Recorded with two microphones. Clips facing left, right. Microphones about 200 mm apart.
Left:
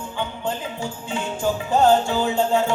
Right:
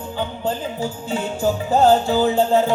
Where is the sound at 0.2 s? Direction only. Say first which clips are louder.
Right 3 dB; 35° right (ahead or behind).